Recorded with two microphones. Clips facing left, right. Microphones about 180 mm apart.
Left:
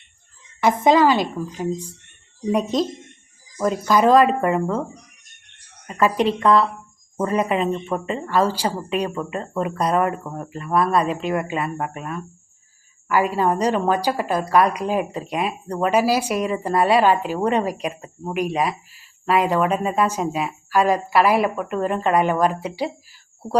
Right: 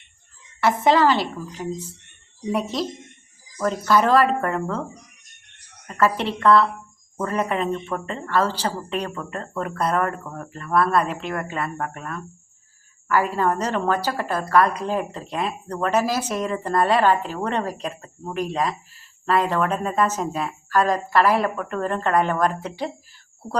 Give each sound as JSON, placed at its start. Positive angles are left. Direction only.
{"t": 0.6, "sound": "a woman's voice", "side_deg": 15}
{"t": 5.9, "sound": "a woman's voice", "side_deg": 15}